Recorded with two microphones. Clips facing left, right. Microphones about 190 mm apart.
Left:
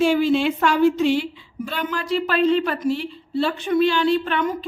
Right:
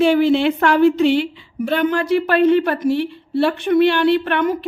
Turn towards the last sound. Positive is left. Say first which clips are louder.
# right 4 dB
turn(degrees=-60)  # may be behind; listen again after turning